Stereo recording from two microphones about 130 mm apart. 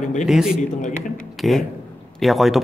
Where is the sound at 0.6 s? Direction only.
75° left (ahead or behind).